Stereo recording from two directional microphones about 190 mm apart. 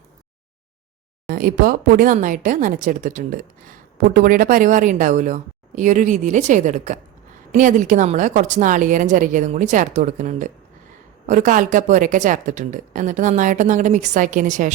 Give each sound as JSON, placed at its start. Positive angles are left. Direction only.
{"t": 1.3, "sound": "a woman's voice", "side_deg": -50}